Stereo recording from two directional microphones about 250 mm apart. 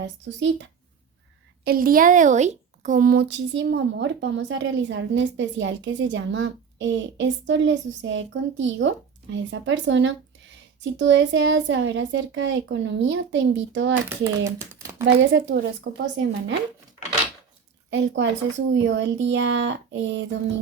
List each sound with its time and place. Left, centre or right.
0.0 s a woman's voice: right
1.6 s a woman's voice: right
14.1 s speech: centre
15.0 s a woman's voice: right
17.9 s a woman's voice: right